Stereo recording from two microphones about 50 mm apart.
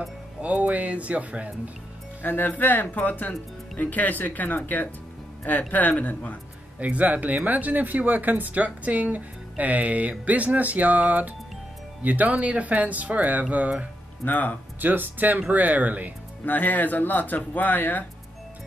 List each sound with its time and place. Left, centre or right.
0.4 s speech: right
2.2 s speech: left
6.8 s speech: right
14.2 s speech: left
14.8 s speech: right
16.4 s speech: left